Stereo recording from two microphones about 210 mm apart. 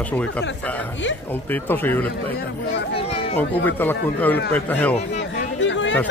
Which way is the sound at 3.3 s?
10° left (ahead or behind).